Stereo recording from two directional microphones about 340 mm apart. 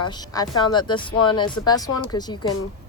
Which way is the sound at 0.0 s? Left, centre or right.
Centre.